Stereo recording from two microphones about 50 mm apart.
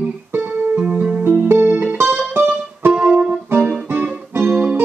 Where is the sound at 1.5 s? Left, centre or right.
Right.